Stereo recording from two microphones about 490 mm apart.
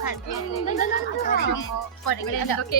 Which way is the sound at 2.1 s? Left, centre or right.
Left.